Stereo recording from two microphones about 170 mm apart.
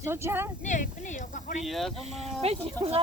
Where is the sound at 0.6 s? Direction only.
45° left (ahead or behind).